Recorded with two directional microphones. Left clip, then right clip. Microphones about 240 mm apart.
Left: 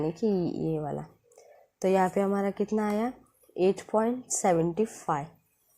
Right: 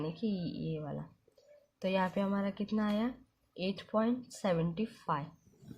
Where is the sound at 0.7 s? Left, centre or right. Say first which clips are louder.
Left 9 dB; left.